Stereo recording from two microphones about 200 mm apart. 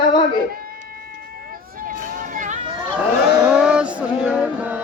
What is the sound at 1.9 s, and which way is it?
Vehicle, 45° right (ahead or behind).